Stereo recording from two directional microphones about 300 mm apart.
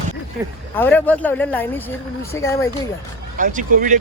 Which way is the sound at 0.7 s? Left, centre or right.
Centre.